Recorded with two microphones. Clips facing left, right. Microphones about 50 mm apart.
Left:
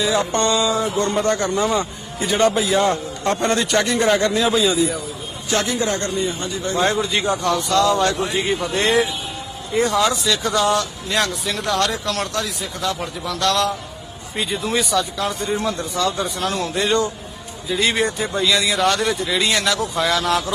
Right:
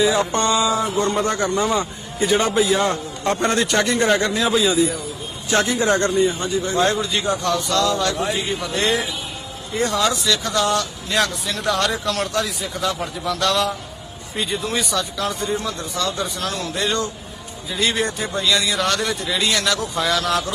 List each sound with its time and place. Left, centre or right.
0.0 s speech: centre
5.5 s a man's voice: centre
5.7 s speech: right
6.1 s speech: centre
6.8 s a man's voice: left
9.7 s speech: centre
15.5 s speech: left
17.7 s speech: centre
19.4 s speech: centre
19.6 s speech: centre